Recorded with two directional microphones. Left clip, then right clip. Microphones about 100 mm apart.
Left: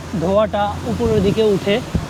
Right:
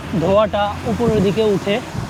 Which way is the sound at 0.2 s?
15° right (ahead or behind).